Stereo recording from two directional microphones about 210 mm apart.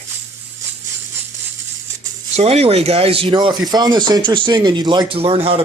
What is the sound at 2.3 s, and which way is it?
Speech, 30° right (ahead or behind).